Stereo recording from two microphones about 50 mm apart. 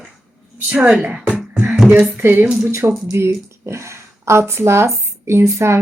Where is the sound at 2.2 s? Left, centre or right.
Right.